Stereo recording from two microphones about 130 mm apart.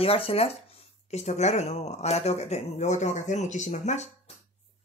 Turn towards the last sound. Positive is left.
turn(degrees=60)  # may be behind; listen again after turning